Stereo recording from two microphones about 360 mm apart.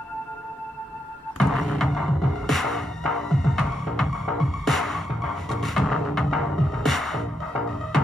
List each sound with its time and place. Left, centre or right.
1.4 s music: centre